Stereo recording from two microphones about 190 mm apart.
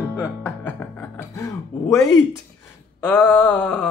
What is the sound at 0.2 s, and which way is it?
Music, 5° left (ahead or behind).